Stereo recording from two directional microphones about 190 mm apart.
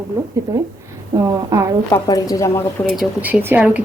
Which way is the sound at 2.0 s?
20° left (ahead or behind).